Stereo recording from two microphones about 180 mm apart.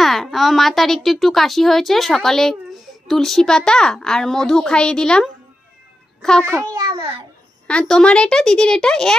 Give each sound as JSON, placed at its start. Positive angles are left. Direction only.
{"t": 0.0, "sound": "speech", "side_deg": 0}
{"t": 6.7, "sound": "babbling", "side_deg": -30}
{"t": 7.6, "sound": "speech", "side_deg": 5}